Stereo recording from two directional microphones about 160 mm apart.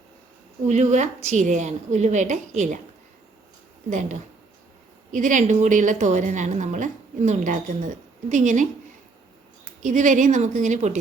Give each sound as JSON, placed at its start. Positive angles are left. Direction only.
{"t": 0.7, "sound": "a woman's voice", "side_deg": -45}
{"t": 3.8, "sound": "a woman's voice", "side_deg": -50}
{"t": 9.8, "sound": "a woman's voice", "side_deg": -50}